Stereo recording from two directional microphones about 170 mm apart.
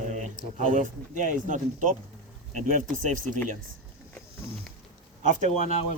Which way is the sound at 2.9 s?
50° right (ahead or behind).